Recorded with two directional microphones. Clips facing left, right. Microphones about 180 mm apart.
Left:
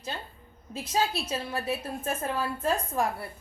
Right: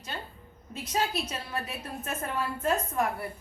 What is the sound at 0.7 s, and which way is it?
A woman's voice, 30° left (ahead or behind).